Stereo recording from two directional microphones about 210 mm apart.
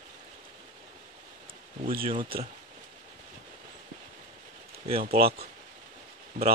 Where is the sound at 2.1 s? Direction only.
25° right (ahead or behind).